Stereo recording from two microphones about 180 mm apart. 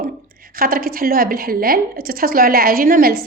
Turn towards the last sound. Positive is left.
turn(degrees=-55)  # may be behind; listen again after turning